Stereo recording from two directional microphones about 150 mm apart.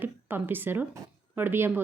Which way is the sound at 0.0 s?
15° right (ahead or behind).